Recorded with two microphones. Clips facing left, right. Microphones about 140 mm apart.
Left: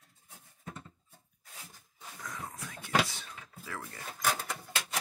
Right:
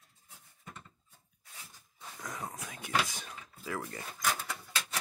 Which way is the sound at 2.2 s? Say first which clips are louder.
Right 2 dB; 20° right (ahead or behind).